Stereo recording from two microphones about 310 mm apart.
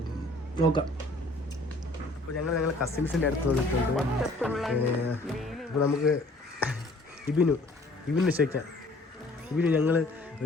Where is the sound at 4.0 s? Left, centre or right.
Centre.